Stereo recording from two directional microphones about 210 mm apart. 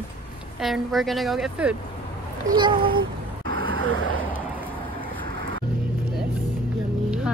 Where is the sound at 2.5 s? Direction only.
25° right (ahead or behind).